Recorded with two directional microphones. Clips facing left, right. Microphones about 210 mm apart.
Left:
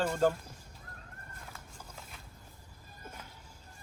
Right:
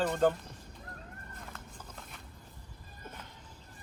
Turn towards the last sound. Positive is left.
turn(degrees=10)  # may be behind; listen again after turning